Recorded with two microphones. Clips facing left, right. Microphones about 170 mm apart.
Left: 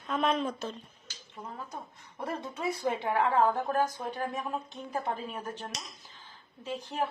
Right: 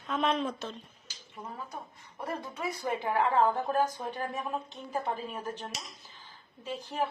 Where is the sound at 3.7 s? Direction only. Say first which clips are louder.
Even; 15° right (ahead or behind).